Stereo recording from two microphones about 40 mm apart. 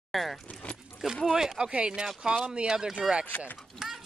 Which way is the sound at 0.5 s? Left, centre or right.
Left.